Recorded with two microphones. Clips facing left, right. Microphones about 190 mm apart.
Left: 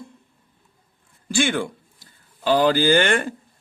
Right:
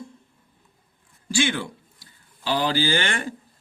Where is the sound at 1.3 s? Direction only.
55° left (ahead or behind).